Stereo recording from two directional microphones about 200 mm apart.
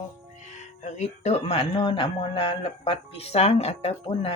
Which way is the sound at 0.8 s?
35° left (ahead or behind).